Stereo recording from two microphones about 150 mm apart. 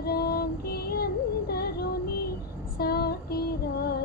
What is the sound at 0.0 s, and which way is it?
Music, 90° left.